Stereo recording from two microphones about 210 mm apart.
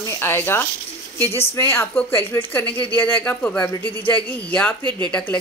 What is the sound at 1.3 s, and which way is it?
Speech, 30° left (ahead or behind).